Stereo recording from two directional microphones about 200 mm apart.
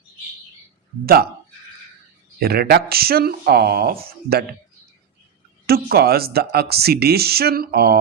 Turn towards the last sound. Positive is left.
turn(degrees=-50)  # may be behind; listen again after turning